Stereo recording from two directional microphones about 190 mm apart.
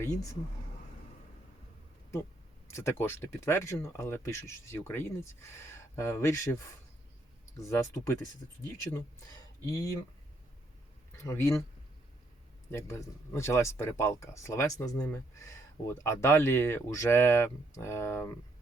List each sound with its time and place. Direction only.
2.7 s speech: 15° left (ahead or behind)
7.7 s speech: 15° left (ahead or behind)
9.6 s speech: 20° left (ahead or behind)
11.2 s speech: 15° left (ahead or behind)
12.7 s speech: 15° left (ahead or behind)